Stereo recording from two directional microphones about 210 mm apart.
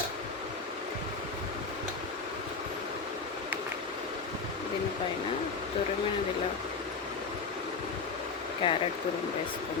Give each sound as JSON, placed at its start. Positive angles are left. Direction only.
{"t": 8.6, "sound": "speech", "side_deg": 25}